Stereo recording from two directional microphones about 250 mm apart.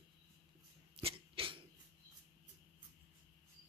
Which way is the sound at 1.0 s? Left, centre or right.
Right.